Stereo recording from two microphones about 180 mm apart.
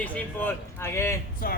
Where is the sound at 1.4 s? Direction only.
55° left (ahead or behind).